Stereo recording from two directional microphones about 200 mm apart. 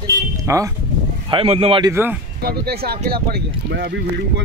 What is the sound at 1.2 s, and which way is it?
Speech, 30° right (ahead or behind).